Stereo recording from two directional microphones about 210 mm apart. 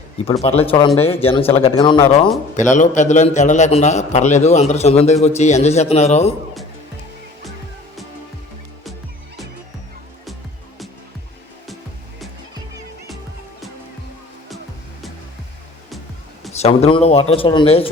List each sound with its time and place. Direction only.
0.4 s speech: 25° left (ahead or behind)
2.6 s a man's voice: 35° left (ahead or behind)
16.5 s speech: 30° left (ahead or behind)